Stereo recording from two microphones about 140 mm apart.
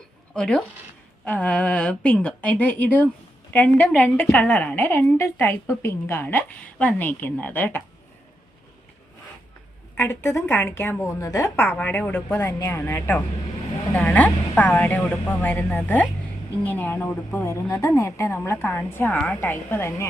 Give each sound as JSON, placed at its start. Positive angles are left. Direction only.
{"t": 0.3, "sound": "a woman's voice", "side_deg": 5}
{"t": 10.0, "sound": "a woman's voice", "side_deg": 20}